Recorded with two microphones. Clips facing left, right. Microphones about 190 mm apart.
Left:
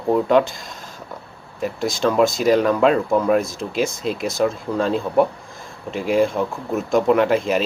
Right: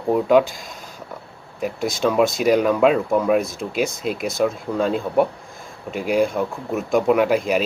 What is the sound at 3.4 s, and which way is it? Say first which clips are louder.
Speech: even; 55° right (ahead or behind).